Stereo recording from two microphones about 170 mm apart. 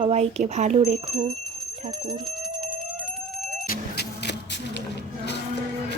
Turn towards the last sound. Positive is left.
turn(degrees=90)